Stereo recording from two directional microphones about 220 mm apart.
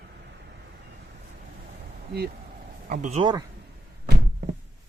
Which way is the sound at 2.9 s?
30° right (ahead or behind).